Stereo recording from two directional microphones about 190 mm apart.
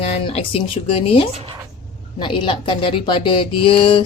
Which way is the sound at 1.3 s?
30° right (ahead or behind).